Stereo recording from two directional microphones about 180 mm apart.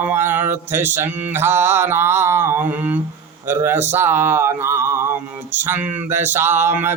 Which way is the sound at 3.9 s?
10° right (ahead or behind).